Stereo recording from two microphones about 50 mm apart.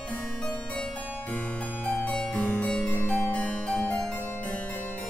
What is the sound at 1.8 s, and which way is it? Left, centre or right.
Harpsichord, left.